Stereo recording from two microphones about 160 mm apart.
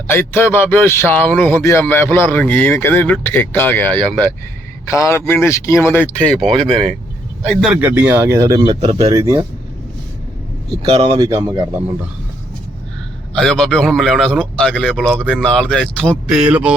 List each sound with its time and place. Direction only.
0.1 s speech: 15° left (ahead or behind)
6.7 s speech: 35° right (ahead or behind)
7.5 s speech: 5° right (ahead or behind); by 8.6 s 20° right (ahead or behind)
8.8 s speech: 40° right (ahead or behind)
9.1 s speech: 20° right (ahead or behind)
11.0 s speech: 30° right (ahead or behind)
13.3 s a man's voice: 5° left (ahead or behind)
16.4 s speech: 10° right (ahead or behind)